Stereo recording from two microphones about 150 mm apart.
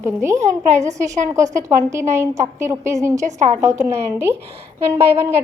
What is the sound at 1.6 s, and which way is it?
A woman's voice, 20° right (ahead or behind).